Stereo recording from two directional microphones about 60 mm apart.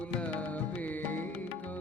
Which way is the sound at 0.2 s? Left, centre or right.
Left.